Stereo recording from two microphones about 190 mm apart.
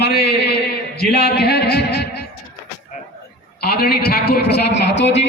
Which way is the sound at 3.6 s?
55° left (ahead or behind).